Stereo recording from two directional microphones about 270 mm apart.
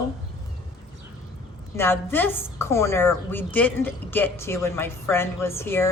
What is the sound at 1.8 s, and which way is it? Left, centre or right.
A woman's voice, centre.